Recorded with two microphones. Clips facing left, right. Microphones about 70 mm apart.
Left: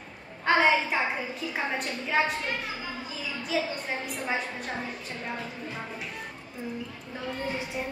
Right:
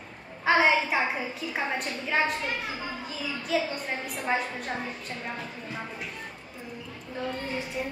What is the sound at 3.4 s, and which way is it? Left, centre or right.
Speech, centre.